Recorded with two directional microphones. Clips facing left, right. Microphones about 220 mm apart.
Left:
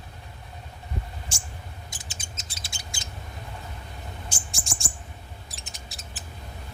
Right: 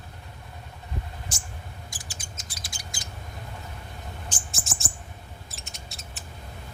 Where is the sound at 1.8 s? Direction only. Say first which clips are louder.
Even; 20° left (ahead or behind).